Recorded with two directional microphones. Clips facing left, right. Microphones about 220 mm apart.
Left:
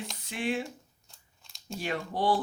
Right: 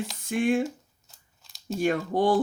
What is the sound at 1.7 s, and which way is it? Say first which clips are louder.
Speech: right 8 dB; 50° right (ahead or behind).